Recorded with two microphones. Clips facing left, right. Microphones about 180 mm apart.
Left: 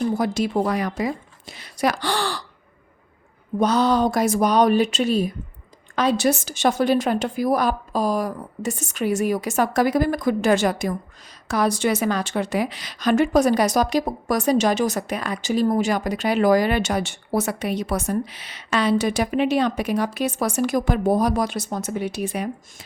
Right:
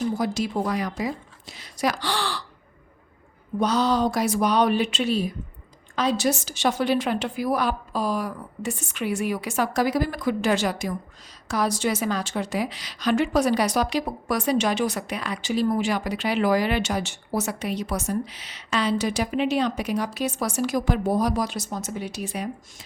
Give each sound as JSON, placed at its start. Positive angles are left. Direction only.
{"t": 0.2, "sound": "a woman's voice", "side_deg": 55}
{"t": 3.6, "sound": "a woman's voice", "side_deg": 50}
{"t": 6.0, "sound": "a woman's voice", "side_deg": 60}
{"t": 17.4, "sound": "a woman's voice", "side_deg": 55}